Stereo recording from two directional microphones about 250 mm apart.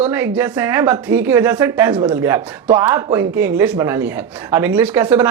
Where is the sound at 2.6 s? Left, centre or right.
Right.